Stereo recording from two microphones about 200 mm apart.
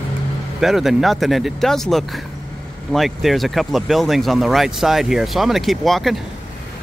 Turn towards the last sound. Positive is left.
turn(degrees=0)  # may be behind; listen again after turning